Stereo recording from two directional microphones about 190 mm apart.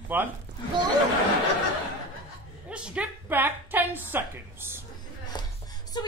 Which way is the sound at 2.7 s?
5° right (ahead or behind).